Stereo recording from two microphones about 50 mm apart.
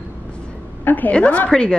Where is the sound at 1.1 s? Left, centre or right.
Left.